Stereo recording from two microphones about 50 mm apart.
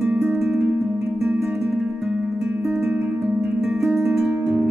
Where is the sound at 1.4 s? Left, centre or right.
Centre.